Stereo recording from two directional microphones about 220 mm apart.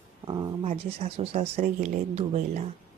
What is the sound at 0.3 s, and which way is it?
Speech, 20° right (ahead or behind).